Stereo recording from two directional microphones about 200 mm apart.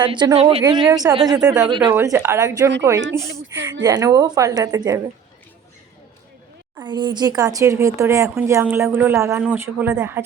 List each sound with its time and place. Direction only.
0.0 s speech: 20° right (ahead or behind)
1.4 s speech: 5° right (ahead or behind)
1.7 s speech: 25° right (ahead or behind)
2.0 s speech: 15° right (ahead or behind)
3.2 s speech: 75° right (ahead or behind)
3.8 s speech: 20° right (ahead or behind)
6.7 s speech: 20° right (ahead or behind)